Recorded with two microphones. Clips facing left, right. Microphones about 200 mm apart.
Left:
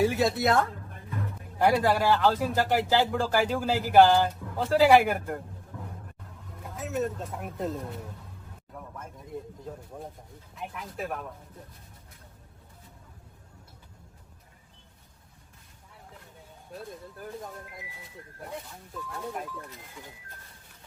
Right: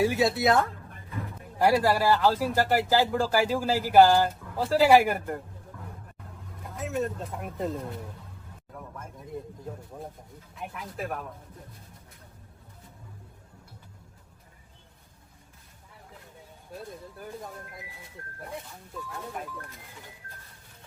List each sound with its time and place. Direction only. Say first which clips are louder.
0.0 s a man's voice: right 1 dB; centre (ahead or behind)
6.7 s speech: even; centre (ahead or behind)
10.5 s speech: even; centre (ahead or behind)
16.7 s speech: even; centre (ahead or behind)
19.1 s speech: left 3 dB; centre (ahead or behind)